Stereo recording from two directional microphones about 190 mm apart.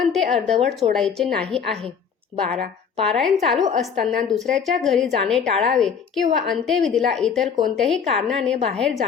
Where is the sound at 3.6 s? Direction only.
35° right (ahead or behind).